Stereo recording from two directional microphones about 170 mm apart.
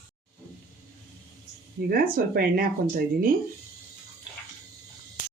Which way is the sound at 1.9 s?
60° right (ahead or behind).